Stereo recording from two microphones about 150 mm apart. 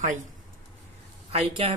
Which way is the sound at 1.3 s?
40° right (ahead or behind).